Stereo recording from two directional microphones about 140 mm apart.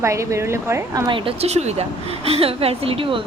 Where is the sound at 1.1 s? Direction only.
45° right (ahead or behind).